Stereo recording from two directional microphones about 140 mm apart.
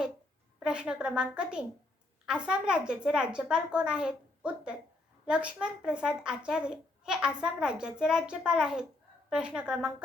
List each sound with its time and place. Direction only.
0.6 s a woman's voice: 5° right (ahead or behind)